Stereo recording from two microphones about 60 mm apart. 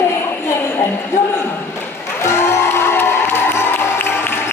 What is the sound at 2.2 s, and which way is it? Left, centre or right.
Music, left.